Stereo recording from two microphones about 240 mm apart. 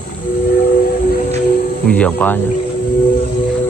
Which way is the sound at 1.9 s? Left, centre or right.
Centre.